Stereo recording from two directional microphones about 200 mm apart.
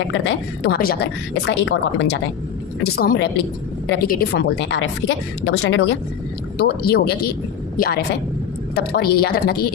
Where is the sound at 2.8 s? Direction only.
50° left (ahead or behind); by 5.9 s 70° left (ahead or behind).